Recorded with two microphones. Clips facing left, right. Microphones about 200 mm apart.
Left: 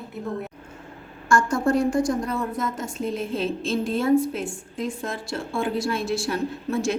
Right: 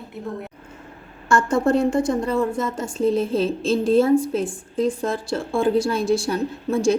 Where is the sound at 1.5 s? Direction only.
25° right (ahead or behind).